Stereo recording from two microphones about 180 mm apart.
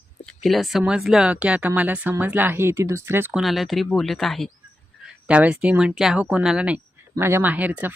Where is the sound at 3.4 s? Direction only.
Centre (ahead or behind).